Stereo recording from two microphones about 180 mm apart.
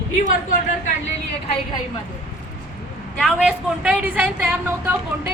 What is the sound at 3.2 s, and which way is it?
A woman's voice, 5° right (ahead or behind).